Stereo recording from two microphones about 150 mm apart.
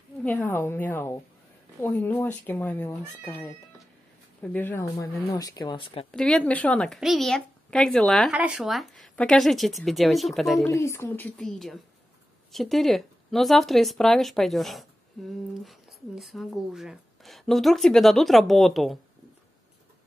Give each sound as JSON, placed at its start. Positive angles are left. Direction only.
{"t": 0.2, "sound": "speech", "side_deg": 15}
{"t": 6.1, "sound": "speech", "side_deg": 5}
{"t": 10.7, "sound": "speech", "side_deg": 20}